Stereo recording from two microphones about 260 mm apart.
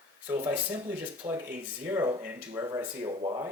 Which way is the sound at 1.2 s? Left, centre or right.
Centre.